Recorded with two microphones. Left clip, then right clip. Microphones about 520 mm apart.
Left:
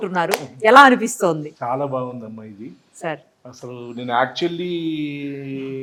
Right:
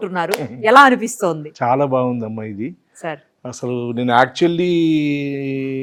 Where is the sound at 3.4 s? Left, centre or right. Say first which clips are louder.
Right 10 dB; right.